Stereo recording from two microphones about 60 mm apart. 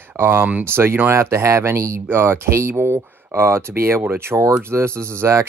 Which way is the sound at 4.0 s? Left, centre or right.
Right.